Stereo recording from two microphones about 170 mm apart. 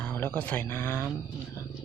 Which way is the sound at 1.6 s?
15° left (ahead or behind).